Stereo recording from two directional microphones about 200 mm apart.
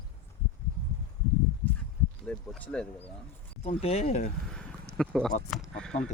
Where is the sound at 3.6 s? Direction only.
30° left (ahead or behind).